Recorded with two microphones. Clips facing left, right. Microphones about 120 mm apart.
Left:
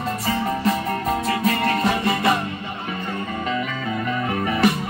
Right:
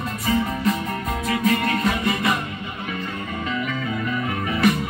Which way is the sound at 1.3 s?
35° left (ahead or behind).